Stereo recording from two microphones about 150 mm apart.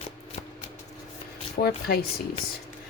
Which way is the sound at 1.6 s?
70° left (ahead or behind).